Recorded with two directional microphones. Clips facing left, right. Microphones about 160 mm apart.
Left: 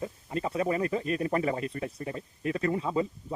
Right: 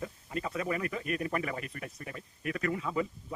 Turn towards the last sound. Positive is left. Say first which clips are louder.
# left 4 dB
turn(degrees=30)  # may be behind; listen again after turning